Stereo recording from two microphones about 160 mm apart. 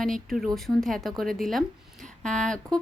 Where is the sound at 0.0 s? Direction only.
Centre (ahead or behind).